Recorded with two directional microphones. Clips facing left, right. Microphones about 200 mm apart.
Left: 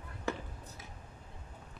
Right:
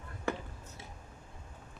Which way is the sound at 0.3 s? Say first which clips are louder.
Right 2 dB; 55° right (ahead or behind).